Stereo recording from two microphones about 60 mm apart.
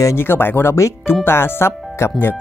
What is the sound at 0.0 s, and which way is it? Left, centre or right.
Speech, left.